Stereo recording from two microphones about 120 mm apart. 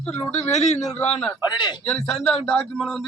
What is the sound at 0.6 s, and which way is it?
Speech, 70° left (ahead or behind).